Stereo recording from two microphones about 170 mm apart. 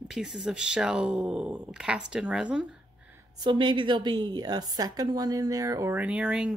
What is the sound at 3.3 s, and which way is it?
A woman's voice, 25° right (ahead or behind).